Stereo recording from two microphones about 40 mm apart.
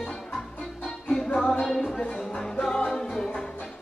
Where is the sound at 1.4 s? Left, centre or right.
Centre.